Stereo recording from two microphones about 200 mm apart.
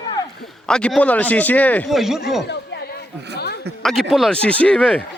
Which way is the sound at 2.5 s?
55° left (ahead or behind).